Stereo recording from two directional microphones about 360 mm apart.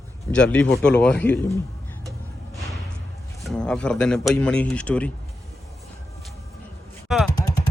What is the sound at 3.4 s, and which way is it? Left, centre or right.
A man's voice, centre.